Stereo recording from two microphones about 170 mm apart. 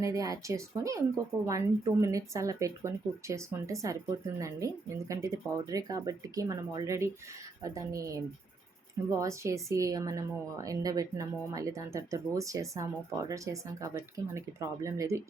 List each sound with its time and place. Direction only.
0.0 s speech: 20° right (ahead or behind)